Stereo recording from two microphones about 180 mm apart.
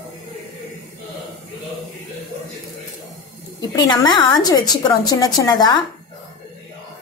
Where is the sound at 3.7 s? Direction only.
25° left (ahead or behind).